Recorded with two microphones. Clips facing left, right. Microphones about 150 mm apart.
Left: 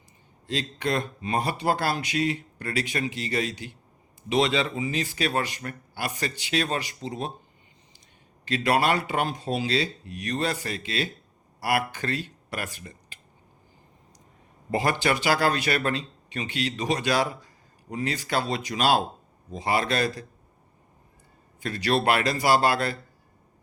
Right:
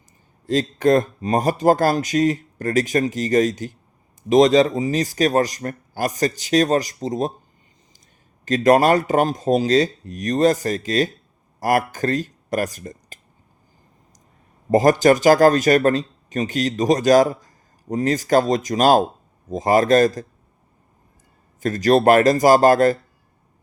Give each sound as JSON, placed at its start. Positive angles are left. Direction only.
{"t": 0.4, "sound": "speech", "side_deg": -45}
{"t": 8.4, "sound": "speech", "side_deg": -45}
{"t": 14.7, "sound": "speech", "side_deg": -40}
{"t": 21.6, "sound": "speech", "side_deg": -45}